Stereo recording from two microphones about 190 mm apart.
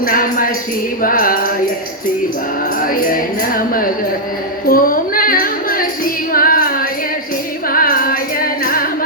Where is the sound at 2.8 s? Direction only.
50° left (ahead or behind).